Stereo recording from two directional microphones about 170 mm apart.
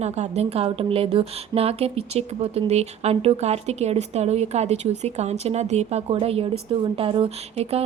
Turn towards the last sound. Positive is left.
turn(degrees=-35)  # may be behind; listen again after turning